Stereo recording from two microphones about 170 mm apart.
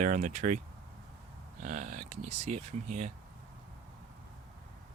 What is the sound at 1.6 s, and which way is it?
Speech, 45° right (ahead or behind).